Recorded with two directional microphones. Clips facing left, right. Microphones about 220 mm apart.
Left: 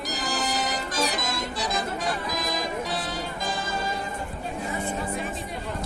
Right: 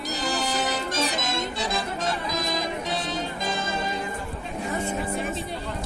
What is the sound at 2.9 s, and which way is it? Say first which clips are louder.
Music: right 2 dB; 20° right (ahead or behind).